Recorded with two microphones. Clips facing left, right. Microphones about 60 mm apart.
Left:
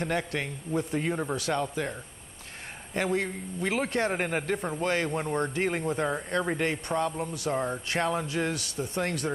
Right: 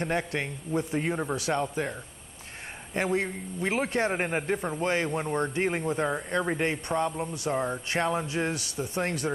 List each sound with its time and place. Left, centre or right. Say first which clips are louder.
0.0 s a man's voice: right 1 dB; centre